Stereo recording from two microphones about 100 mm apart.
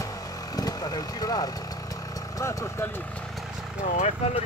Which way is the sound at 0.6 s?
40° left (ahead or behind).